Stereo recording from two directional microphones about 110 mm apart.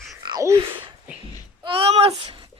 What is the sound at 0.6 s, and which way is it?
Speech, 50° right (ahead or behind).